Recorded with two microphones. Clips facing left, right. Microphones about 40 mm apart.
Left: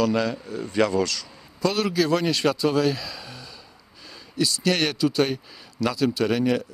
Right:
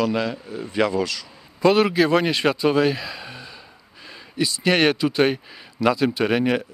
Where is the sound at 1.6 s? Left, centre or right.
Right.